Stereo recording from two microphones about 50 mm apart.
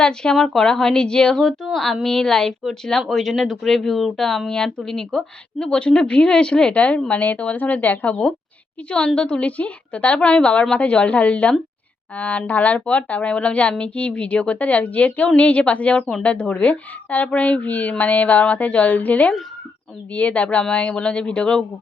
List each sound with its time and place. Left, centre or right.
0.0 s speech: centre; by 8.2 s left
8.9 s speech: left